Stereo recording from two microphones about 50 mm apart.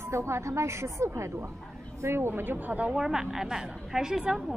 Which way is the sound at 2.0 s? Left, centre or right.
Right.